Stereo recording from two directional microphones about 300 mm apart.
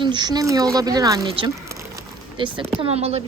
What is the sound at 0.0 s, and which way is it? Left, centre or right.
A woman's voice, centre.